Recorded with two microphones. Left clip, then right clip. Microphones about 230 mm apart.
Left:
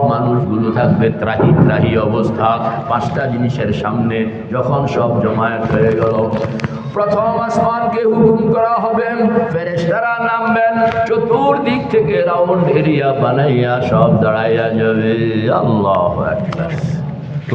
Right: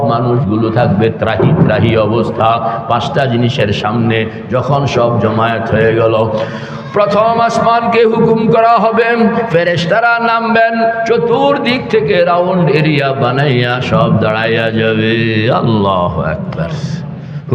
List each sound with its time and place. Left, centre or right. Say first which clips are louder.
0.1 s a man's voice: right 3 dB; right
6.9 s a man's voice: right 5 dB; right